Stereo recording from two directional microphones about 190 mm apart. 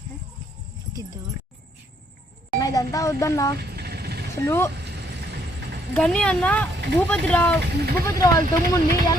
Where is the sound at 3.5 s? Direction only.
60° right (ahead or behind).